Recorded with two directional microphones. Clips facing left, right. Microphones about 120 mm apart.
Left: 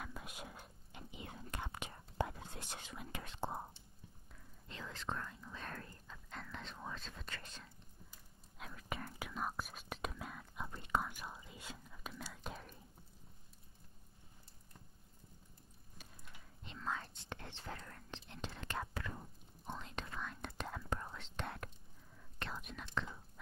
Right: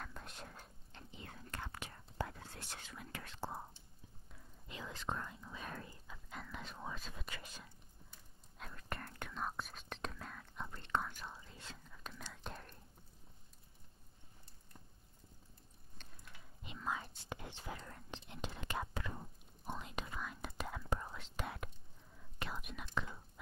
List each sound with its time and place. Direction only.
0.0 s whispering: 5° left (ahead or behind)
4.6 s whispering: 15° right (ahead or behind)
8.5 s whispering: centre (ahead or behind)
16.6 s whispering: 10° right (ahead or behind)